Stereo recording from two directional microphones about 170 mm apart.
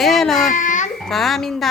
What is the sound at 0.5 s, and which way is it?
Babbling, 50° left (ahead or behind).